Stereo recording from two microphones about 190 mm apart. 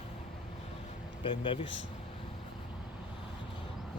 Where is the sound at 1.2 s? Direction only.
25° left (ahead or behind).